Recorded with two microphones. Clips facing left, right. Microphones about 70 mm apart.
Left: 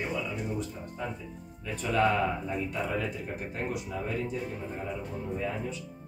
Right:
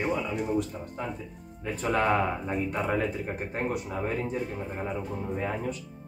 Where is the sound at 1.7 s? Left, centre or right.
Right.